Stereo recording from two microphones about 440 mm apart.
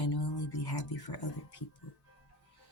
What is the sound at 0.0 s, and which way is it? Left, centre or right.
Music, left.